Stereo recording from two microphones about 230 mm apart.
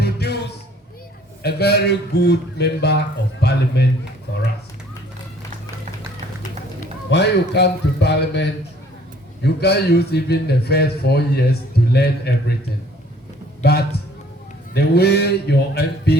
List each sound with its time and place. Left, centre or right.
0.0 s music: left
1.4 s a man's voice: left
7.1 s a man's voice: left
13.6 s a man's voice: left